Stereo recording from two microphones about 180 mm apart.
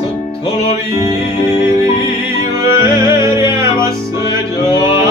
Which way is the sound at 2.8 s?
25° left (ahead or behind).